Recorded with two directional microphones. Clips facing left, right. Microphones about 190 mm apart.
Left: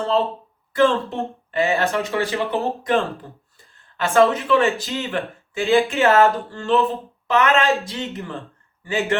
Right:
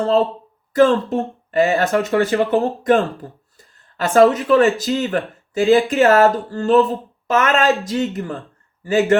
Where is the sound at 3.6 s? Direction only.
35° right (ahead or behind).